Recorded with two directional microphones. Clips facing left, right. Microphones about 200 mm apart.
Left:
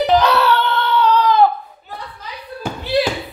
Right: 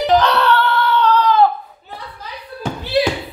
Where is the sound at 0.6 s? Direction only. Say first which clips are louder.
Right 2 dB; 20° left (ahead or behind).